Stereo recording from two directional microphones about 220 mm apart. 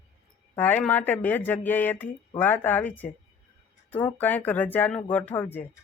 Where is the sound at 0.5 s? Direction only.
10° left (ahead or behind).